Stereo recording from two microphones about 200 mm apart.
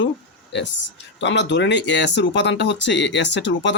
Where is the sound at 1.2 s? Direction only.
60° left (ahead or behind).